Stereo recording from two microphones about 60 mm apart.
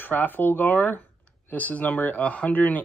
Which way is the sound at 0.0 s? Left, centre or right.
Left.